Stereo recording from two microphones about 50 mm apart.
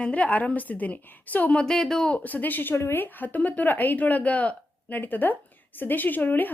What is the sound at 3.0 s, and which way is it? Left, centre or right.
Speech, left.